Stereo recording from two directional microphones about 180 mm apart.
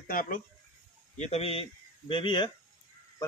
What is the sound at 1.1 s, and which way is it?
A man's voice, 40° left (ahead or behind).